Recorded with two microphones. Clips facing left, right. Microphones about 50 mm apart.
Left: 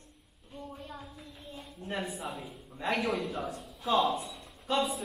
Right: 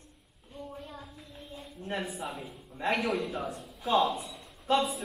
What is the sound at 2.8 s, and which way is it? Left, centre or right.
Speech, right.